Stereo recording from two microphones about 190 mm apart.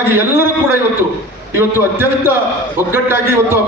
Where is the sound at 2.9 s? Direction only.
15° right (ahead or behind).